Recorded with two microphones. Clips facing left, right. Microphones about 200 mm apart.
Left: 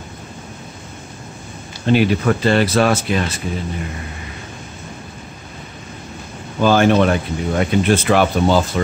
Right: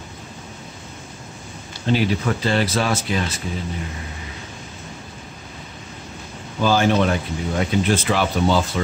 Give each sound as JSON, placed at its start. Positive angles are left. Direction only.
{"t": 1.9, "sound": "speech", "side_deg": 60}
{"t": 6.6, "sound": "speech", "side_deg": 60}